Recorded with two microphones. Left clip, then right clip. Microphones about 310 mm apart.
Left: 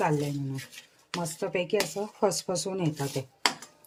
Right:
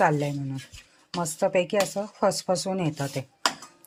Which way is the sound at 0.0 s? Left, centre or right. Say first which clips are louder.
Right 5 dB; centre.